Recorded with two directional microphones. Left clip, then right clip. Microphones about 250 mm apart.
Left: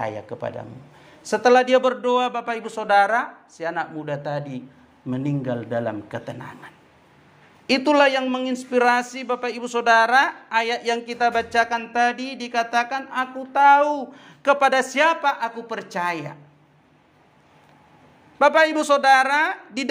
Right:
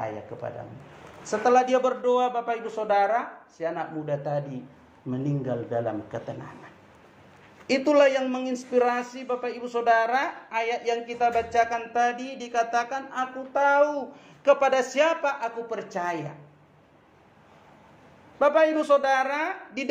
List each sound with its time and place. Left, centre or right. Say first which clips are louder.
1.3 s a woman's voice: left 5 dB; left
18.4 s speech: left 4 dB; left